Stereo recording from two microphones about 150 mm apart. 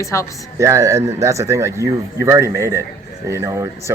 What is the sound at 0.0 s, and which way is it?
Speech, 20° left (ahead or behind).